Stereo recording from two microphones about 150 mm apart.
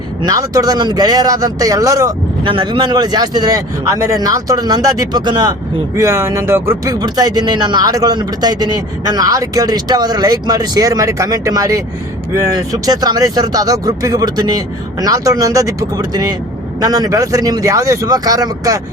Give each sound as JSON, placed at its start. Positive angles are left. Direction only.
{"t": 0.2, "sound": "speech", "side_deg": -25}